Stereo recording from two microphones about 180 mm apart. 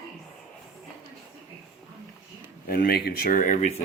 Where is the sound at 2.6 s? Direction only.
55° left (ahead or behind).